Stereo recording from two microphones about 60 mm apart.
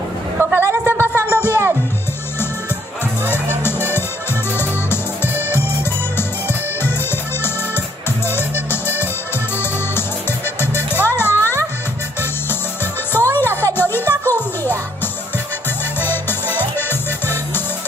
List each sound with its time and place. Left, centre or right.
0.4 s a sound: right
1.0 s music: left
4.6 s music: left
10.6 s music: left
13.1 s music: left
16.0 s music: left